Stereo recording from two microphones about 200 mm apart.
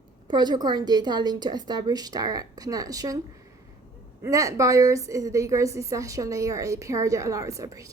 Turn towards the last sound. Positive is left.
turn(degrees=-15)  # may be behind; listen again after turning